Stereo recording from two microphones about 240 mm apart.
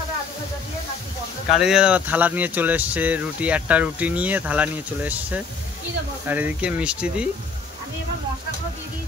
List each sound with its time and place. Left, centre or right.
1.5 s speech: centre